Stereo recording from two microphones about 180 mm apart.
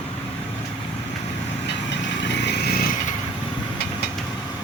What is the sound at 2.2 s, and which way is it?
Vehicle, 70° left (ahead or behind).